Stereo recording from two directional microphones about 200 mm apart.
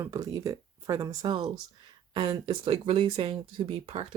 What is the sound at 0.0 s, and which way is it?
Speech, 15° right (ahead or behind).